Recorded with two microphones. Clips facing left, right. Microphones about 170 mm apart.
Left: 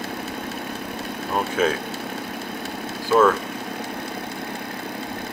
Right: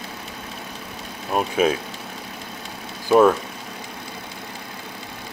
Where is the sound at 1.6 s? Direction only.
15° right (ahead or behind).